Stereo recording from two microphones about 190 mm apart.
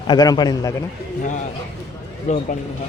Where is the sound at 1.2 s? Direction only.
40° left (ahead or behind).